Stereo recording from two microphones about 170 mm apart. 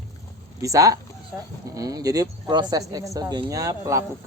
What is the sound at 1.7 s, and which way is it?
Speech, 20° right (ahead or behind).